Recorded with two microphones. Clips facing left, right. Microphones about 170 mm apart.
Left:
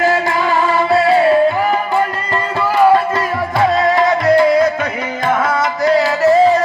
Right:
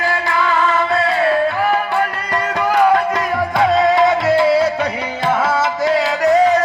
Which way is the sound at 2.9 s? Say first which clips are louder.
Left 2 dB; centre (ahead or behind).